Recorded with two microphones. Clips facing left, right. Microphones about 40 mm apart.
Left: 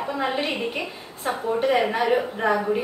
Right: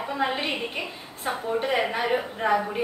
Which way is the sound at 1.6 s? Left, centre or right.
Centre.